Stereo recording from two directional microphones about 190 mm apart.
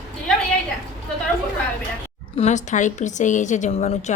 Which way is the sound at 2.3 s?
35° left (ahead or behind).